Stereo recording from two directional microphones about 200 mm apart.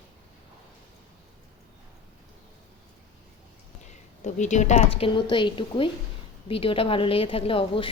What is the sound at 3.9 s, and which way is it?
A woman's voice, 35° left (ahead or behind).